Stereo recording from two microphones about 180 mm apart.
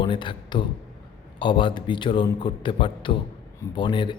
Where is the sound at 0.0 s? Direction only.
25° left (ahead or behind).